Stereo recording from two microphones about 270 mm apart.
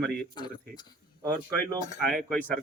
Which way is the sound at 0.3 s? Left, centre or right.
Centre.